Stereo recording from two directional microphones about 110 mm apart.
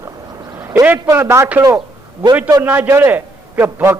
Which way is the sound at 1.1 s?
25° right (ahead or behind).